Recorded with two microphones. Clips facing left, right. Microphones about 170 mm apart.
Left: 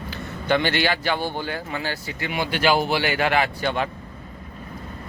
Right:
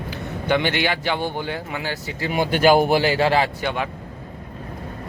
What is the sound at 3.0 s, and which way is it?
Speech, 30° right (ahead or behind).